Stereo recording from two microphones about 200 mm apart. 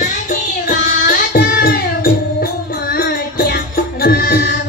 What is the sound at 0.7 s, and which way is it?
Music, 45° left (ahead or behind).